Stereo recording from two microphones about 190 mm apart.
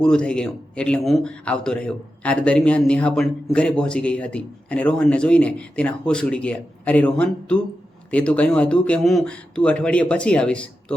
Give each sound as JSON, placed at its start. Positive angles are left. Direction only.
{"t": 0.0, "sound": "a man's voice", "side_deg": 5}